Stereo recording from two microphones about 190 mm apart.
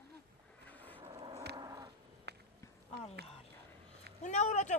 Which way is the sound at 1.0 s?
30° right (ahead or behind).